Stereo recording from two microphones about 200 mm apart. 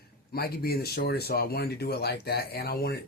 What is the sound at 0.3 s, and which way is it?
Speech, 50° left (ahead or behind).